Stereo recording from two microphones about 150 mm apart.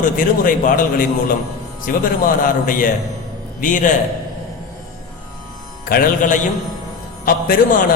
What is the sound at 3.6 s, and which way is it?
Speech, 60° left (ahead or behind).